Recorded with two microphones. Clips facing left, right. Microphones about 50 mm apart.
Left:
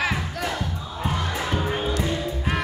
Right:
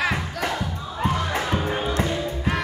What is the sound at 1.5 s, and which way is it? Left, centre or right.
Music, centre.